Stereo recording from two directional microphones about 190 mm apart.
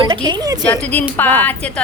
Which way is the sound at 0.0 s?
25° right (ahead or behind).